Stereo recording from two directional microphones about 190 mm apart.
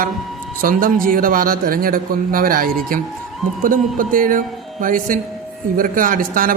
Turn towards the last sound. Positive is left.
turn(degrees=-45)  # may be behind; listen again after turning